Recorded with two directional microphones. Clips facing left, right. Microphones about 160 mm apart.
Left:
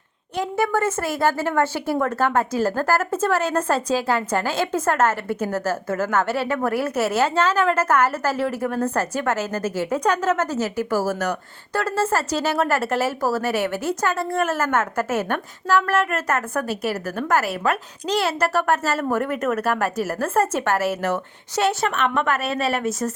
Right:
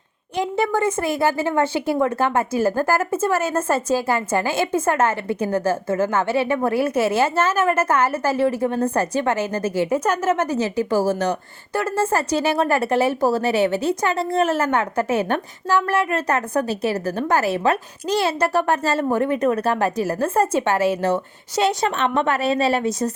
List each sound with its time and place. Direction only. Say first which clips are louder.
0.3 s a woman's voice: right 1 dB; 15° right (ahead or behind)
11.8 s a woman's voice: right 1 dB; 15° right (ahead or behind)
18.0 s a woman's voice: right 1 dB; 10° right (ahead or behind)